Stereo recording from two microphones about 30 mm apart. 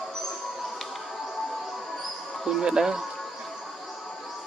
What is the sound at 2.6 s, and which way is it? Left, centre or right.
Speech, right.